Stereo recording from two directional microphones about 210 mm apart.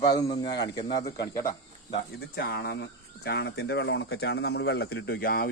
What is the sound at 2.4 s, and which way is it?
Speech, 50° left (ahead or behind).